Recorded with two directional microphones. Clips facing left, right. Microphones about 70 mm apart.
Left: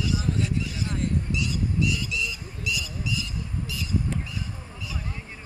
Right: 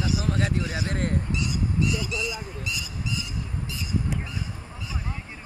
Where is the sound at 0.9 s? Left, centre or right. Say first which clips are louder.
Left 1 dB; right.